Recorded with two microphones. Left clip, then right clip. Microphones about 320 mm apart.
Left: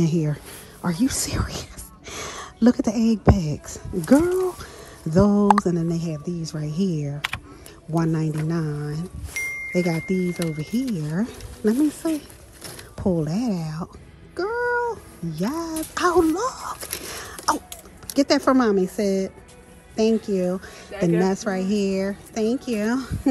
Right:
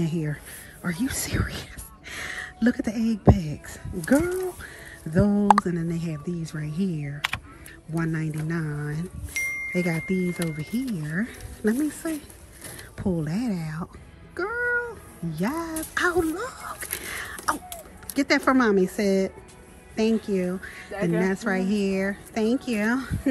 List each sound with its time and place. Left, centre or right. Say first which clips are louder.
0.0 s speech: left 6 dB; centre
5.2 s speech: left 5 dB; right
5.5 s speech: left 1 dB; centre
14.3 s cat: left 2 dB; centre
15.3 s a sound: left 2 dB; centre
18.0 s speech: left 3 dB; centre